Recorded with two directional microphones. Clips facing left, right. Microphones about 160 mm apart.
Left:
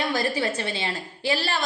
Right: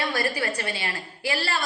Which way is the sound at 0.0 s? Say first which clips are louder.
Left 2 dB; 20° left (ahead or behind).